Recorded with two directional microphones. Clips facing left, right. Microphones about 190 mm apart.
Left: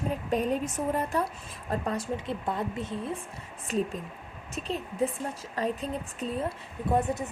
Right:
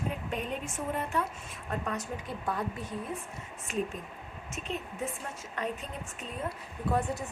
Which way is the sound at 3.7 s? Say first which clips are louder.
Left 4 dB; 40° left (ahead or behind).